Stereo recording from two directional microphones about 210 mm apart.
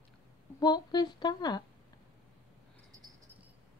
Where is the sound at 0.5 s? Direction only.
20° left (ahead or behind).